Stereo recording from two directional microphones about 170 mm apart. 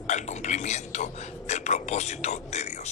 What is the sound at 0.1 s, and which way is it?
Speech, 45° left (ahead or behind).